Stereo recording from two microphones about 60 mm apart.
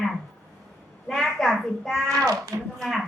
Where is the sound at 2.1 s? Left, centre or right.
Right.